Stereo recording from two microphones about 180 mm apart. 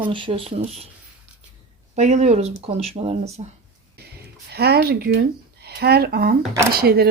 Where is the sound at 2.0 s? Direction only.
40° right (ahead or behind).